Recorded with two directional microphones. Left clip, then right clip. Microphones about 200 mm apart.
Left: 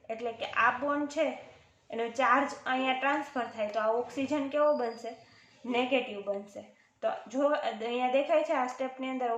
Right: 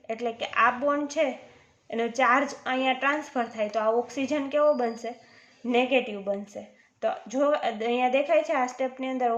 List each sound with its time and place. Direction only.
0.1 s a woman's voice: 55° right (ahead or behind)
7.0 s a woman's voice: 55° right (ahead or behind)